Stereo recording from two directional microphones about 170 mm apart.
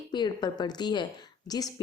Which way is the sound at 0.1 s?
25° left (ahead or behind).